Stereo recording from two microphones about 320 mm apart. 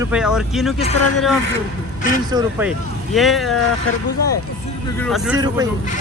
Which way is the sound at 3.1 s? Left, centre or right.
Centre.